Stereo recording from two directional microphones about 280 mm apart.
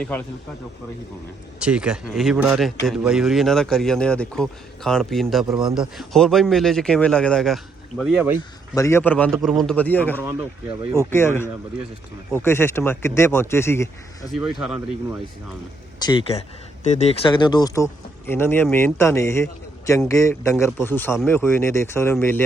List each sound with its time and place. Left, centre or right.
1.5 s speech: centre
8.7 s a man's voice: centre
14.3 s speech: centre
16.0 s a man's voice: centre